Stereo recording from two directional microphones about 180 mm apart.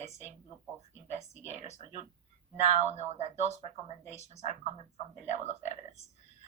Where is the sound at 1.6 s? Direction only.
40° left (ahead or behind).